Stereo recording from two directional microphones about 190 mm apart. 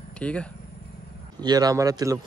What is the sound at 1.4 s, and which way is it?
Speech, 20° right (ahead or behind).